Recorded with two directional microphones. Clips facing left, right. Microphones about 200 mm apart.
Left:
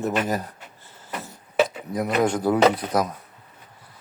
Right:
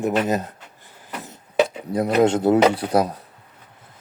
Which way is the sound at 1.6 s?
30° right (ahead or behind).